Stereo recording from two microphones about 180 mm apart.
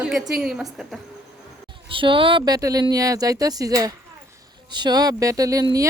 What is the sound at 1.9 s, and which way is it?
Speech, 30° right (ahead or behind).